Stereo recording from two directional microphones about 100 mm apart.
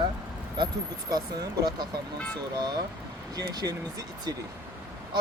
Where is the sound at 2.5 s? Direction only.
45° right (ahead or behind).